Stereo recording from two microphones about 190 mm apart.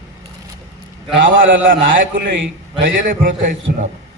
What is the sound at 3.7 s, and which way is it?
Speech, 55° right (ahead or behind).